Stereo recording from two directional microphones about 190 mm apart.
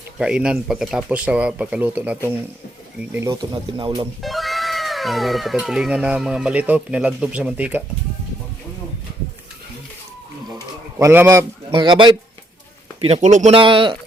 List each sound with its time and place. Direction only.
0.2 s speech: 5° right (ahead or behind); by 4.1 s 25° right (ahead or behind)
4.2 s speech: centre (ahead or behind)
10.9 s a man's voice: 10° right (ahead or behind)
11.7 s speech: 25° right (ahead or behind)
13.0 s speech: 35° right (ahead or behind)
13.6 s speech: 25° right (ahead or behind)